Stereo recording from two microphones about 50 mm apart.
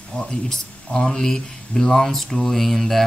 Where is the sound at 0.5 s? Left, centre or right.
Centre.